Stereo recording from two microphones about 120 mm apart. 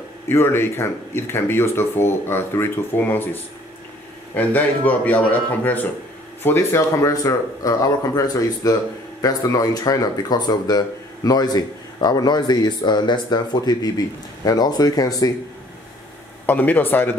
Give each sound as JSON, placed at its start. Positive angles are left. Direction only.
{"t": 0.3, "sound": "a man's voice", "side_deg": 20}
{"t": 16.4, "sound": "a man's voice", "side_deg": 15}